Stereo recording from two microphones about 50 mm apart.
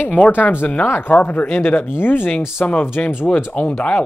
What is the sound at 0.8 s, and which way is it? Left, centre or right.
Speech, left.